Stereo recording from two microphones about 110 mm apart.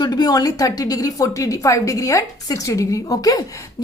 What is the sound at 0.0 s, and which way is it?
A woman's voice, 40° left (ahead or behind).